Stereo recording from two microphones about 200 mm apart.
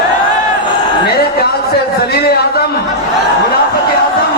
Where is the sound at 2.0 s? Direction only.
50° left (ahead or behind).